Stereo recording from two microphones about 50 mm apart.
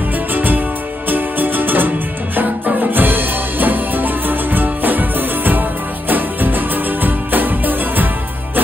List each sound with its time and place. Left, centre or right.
0.3 s music: right